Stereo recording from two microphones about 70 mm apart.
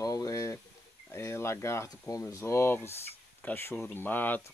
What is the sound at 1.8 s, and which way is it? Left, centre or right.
Speech, left.